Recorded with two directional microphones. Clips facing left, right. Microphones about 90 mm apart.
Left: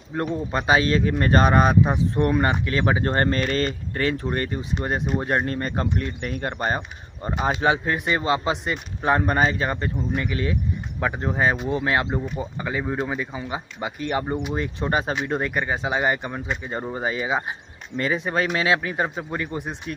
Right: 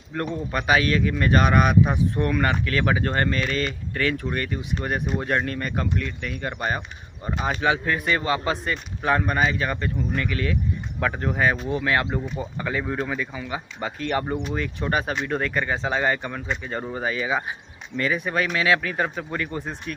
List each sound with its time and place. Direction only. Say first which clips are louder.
0.3 s a man's voice: left 1 dB; 30° left (ahead or behind)
7.6 s a man's voice: right 1 dB; 25° left (ahead or behind)
13.7 s speech: even; 15° left (ahead or behind)
14.3 s a man's voice: left 1 dB; 20° left (ahead or behind)